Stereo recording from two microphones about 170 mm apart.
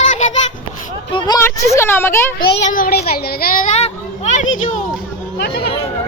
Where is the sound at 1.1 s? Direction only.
25° left (ahead or behind).